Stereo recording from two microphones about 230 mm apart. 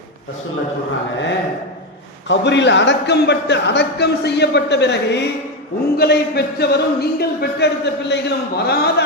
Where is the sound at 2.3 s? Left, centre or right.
Left.